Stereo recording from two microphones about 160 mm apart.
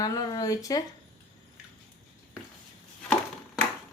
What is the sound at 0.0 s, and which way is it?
Speech, 25° left (ahead or behind).